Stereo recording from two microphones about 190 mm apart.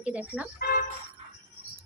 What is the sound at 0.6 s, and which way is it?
Speech, 50° left (ahead or behind).